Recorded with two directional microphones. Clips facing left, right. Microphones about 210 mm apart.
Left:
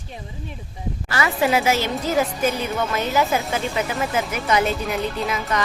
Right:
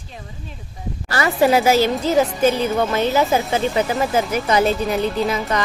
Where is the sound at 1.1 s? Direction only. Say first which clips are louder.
Right 4 dB; 40° right (ahead or behind).